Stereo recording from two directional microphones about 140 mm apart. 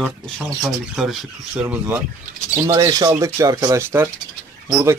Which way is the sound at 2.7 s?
25° right (ahead or behind).